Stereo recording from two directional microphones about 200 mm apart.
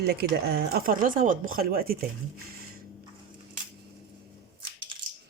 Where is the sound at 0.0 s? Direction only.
55° right (ahead or behind).